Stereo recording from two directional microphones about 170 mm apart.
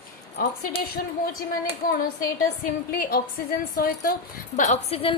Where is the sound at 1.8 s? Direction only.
55° left (ahead or behind).